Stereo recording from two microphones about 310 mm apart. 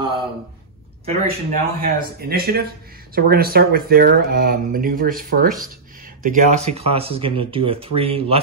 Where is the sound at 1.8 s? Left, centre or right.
Right.